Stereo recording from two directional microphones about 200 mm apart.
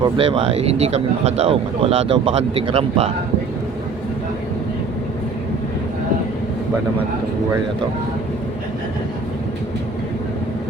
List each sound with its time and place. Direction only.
0.0 s speech: 30° right (ahead or behind)